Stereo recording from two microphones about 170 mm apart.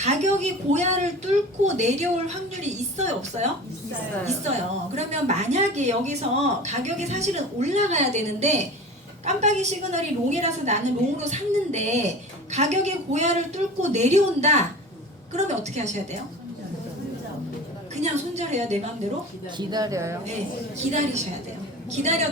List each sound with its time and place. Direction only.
0.0 s a woman's voice: 40° right (ahead or behind)
18.0 s a woman's voice: 40° right (ahead or behind)
19.5 s speech: 20° right (ahead or behind)
20.7 s a woman's voice: 40° right (ahead or behind)